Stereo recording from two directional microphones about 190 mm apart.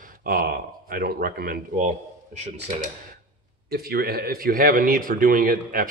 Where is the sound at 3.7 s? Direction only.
55° right (ahead or behind).